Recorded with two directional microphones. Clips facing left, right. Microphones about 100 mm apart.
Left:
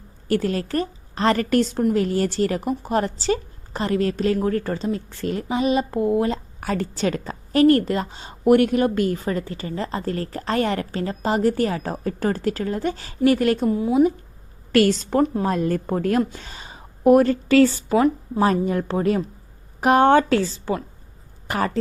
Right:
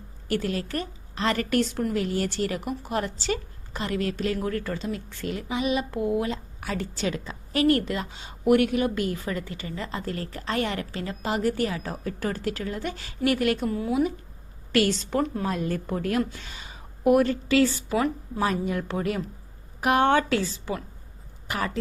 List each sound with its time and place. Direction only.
0.3 s a woman's voice: 40° left (ahead or behind); by 14.1 s 25° left (ahead or behind)
14.7 s a woman's voice: 40° left (ahead or behind)
17.9 s a woman's voice: 30° left (ahead or behind)